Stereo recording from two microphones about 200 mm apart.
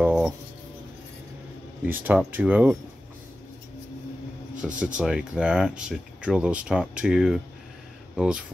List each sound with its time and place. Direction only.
0.0 s a sound: 5° right (ahead or behind)
1.9 s speech: 10° right (ahead or behind)
4.6 s speech: 5° right (ahead or behind)